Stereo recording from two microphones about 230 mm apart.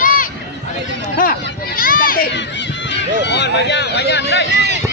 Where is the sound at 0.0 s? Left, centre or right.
Left.